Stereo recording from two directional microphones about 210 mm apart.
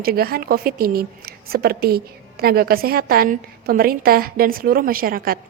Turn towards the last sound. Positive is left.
turn(degrees=-45)  # may be behind; listen again after turning